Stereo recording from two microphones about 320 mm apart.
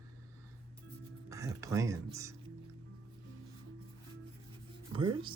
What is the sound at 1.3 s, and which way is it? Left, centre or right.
Speech, centre.